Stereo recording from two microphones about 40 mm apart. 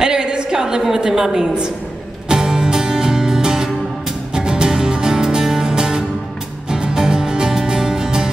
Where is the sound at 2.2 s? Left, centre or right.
Centre.